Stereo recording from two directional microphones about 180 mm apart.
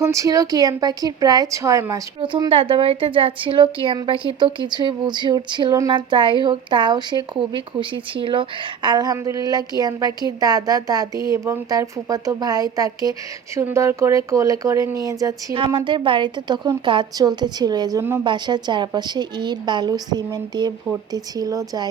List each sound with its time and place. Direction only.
0.0 s a woman's voice: 15° right (ahead or behind)